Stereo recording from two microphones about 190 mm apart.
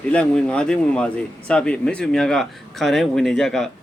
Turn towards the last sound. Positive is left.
turn(degrees=0)  # may be behind; listen again after turning